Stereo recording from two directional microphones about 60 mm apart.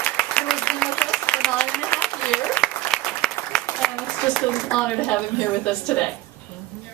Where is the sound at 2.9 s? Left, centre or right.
Centre.